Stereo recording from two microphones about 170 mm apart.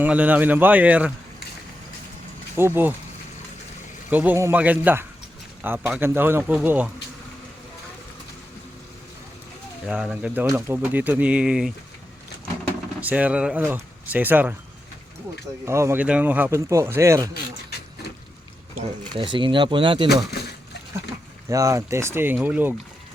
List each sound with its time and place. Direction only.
0.0 s speech: 10° right (ahead or behind)
2.6 s speech: 10° right (ahead or behind)
4.1 s speech: 10° right (ahead or behind)
9.8 s speech: 5° right (ahead or behind)
13.0 s speech: 10° right (ahead or behind)
15.6 s speech: 15° right (ahead or behind)
19.1 s speech: 30° right (ahead or behind)
21.5 s speech: 20° right (ahead or behind)